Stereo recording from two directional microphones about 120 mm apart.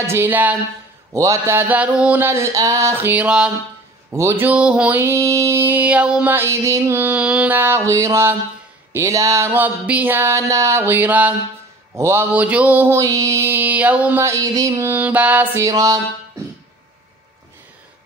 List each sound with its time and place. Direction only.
0.0 s music: 20° right (ahead or behind)
1.1 s music: 25° right (ahead or behind); by 3.5 s 10° right (ahead or behind)
4.1 s music: 25° right (ahead or behind)
12.3 s music: 10° right (ahead or behind)
14.2 s music: 25° right (ahead or behind)
15.6 s music: 30° right (ahead or behind)